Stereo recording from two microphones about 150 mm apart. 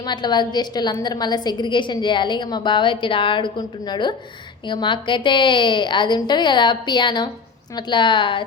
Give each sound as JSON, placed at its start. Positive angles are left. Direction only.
{"t": 0.0, "sound": "a woman's voice", "side_deg": 30}